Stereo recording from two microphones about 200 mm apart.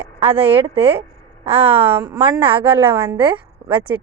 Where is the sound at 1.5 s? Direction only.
30° right (ahead or behind).